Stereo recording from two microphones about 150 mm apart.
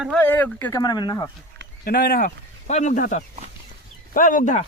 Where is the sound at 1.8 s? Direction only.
90° left.